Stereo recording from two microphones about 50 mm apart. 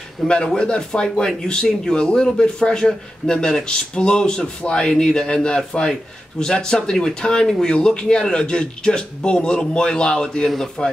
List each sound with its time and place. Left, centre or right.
0.3 s speech: centre